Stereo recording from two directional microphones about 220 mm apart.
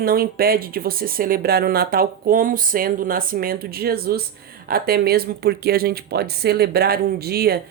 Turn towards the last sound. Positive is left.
turn(degrees=-45)  # may be behind; listen again after turning